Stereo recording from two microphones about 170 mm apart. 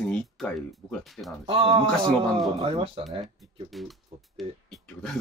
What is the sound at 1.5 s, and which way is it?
Speech, 35° right (ahead or behind).